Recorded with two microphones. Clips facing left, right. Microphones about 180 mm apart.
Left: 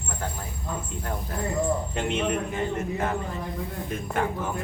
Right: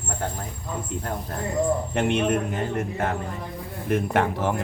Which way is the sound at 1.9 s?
60° right (ahead or behind).